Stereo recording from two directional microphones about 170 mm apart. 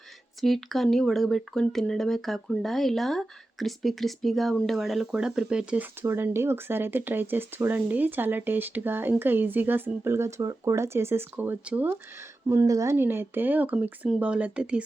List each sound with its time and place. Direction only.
0.4 s speech: centre (ahead or behind)